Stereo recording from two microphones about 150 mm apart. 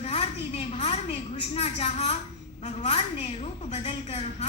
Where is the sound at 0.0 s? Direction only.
45° left (ahead or behind).